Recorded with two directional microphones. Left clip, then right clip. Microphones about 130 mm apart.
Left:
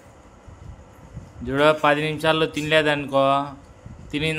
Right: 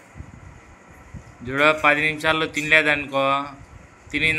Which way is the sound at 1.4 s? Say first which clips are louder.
Even; 50° left (ahead or behind).